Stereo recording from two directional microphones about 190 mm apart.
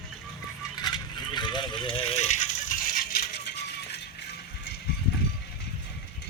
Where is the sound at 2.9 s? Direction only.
50° left (ahead or behind).